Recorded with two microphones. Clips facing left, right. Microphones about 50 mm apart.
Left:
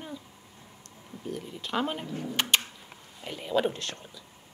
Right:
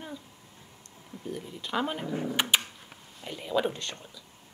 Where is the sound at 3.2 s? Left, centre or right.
Centre.